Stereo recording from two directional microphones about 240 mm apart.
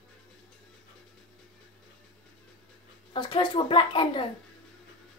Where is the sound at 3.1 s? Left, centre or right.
Centre.